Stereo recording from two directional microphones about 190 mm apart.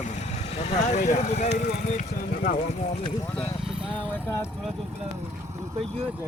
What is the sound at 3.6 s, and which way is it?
Vehicle, 5° right (ahead or behind).